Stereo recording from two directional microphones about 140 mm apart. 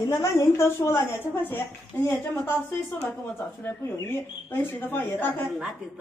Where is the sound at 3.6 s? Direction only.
15° left (ahead or behind).